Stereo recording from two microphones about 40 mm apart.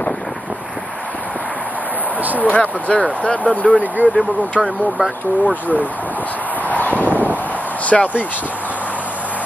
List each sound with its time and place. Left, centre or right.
2.2 s speech: right
2.5 s speech: left
3.7 s speech: right
4.6 s speech: right
5.4 s speech: right
6.7 s a sound: left
7.8 s speech: left